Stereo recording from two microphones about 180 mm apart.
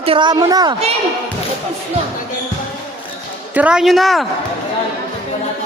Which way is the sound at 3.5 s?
5° right (ahead or behind).